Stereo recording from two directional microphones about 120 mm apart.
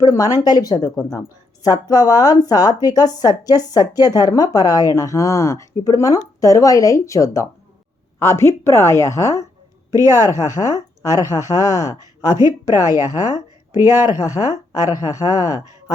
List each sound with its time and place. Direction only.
0.0 s a woman's voice: 30° left (ahead or behind)
9.9 s speech: 25° right (ahead or behind)
10.2 s a woman's voice: 30° left (ahead or behind)
11.9 s speech: 30° right (ahead or behind)
14.9 s a woman's voice: 30° left (ahead or behind)